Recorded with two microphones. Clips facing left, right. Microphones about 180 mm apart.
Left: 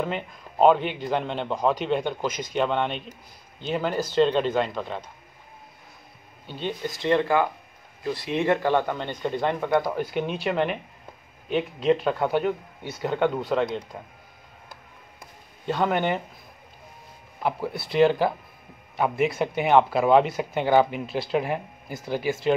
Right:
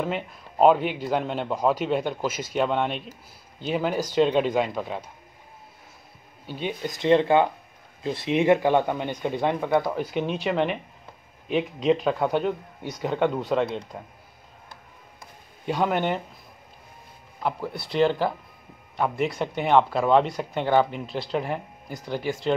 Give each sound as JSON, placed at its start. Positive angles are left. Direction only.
{"t": 0.0, "sound": "a man's voice", "side_deg": -5}
{"t": 6.4, "sound": "speech", "side_deg": -10}
{"t": 9.8, "sound": "a man's voice", "side_deg": 0}
{"t": 15.6, "sound": "a man's voice", "side_deg": -10}
{"t": 17.4, "sound": "a man's voice", "side_deg": 5}